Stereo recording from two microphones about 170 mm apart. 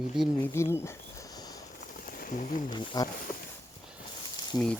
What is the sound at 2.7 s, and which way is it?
Speech, 25° left (ahead or behind).